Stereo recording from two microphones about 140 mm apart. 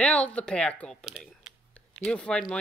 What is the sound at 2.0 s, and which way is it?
Speech, 5° left (ahead or behind).